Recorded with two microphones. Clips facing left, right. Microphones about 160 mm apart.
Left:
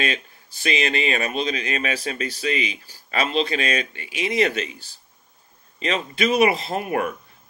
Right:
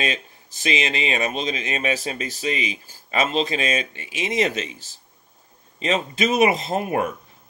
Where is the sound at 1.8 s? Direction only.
40° right (ahead or behind).